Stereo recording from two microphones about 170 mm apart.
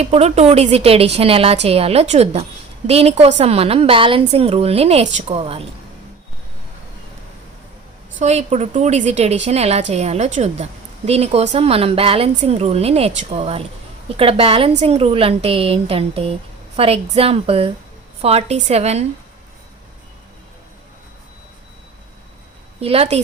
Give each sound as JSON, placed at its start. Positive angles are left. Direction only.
{"t": 0.0, "sound": "a woman's voice", "side_deg": -35}
{"t": 8.2, "sound": "a woman's voice", "side_deg": -40}
{"t": 22.8, "sound": "a woman's voice", "side_deg": -35}